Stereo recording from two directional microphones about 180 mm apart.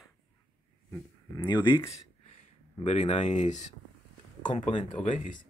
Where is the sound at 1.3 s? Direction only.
20° left (ahead or behind).